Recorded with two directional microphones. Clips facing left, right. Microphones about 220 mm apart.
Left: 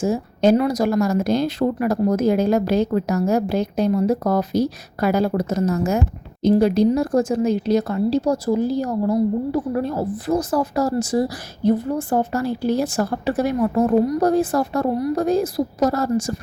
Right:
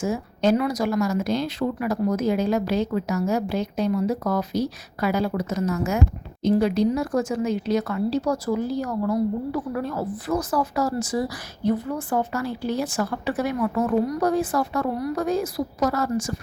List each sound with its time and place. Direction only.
0.0 s a woman's voice: 35° left (ahead or behind)